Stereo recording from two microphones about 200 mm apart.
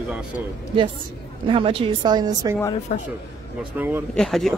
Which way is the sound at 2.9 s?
35° left (ahead or behind).